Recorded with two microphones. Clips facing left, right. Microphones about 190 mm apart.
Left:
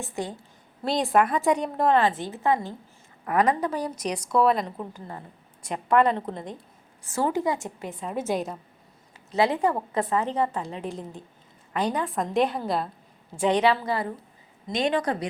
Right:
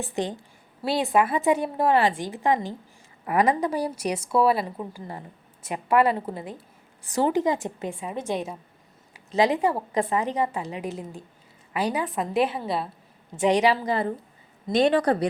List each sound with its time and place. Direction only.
0.8 s a woman's voice: 5° right (ahead or behind)
7.1 s a woman's voice: 20° right (ahead or behind)
8.1 s a woman's voice: 5° left (ahead or behind)
9.1 s a woman's voice: 15° right (ahead or behind)
14.7 s a woman's voice: 35° right (ahead or behind)